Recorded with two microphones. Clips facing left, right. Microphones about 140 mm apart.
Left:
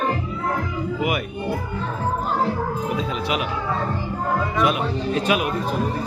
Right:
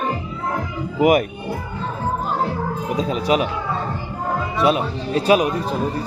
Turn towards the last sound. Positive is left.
turn(degrees=-35)  # may be behind; listen again after turning